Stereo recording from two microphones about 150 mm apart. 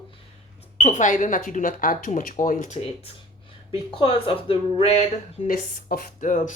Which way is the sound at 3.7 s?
35° left (ahead or behind).